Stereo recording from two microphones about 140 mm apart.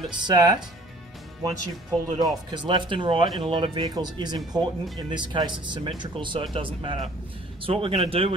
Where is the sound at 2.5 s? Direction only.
35° right (ahead or behind).